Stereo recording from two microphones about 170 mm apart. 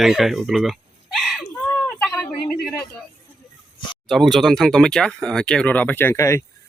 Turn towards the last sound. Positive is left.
turn(degrees=20)  # may be behind; listen again after turning